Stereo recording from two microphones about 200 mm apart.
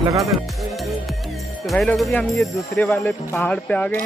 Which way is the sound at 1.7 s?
Centre (ahead or behind).